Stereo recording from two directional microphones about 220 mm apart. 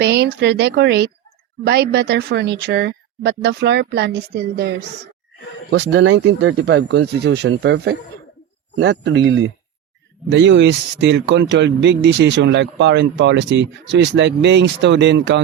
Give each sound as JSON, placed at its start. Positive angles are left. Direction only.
{"t": 0.0, "sound": "speech", "side_deg": -50}